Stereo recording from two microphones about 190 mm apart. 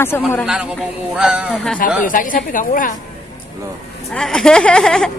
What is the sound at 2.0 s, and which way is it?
Speech, 45° left (ahead or behind).